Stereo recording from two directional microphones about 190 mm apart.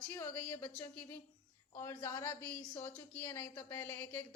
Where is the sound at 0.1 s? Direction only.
10° left (ahead or behind).